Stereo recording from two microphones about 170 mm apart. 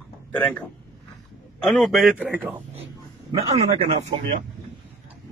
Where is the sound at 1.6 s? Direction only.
Centre (ahead or behind).